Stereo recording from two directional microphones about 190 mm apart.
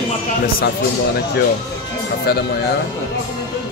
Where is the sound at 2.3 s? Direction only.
55° left (ahead or behind).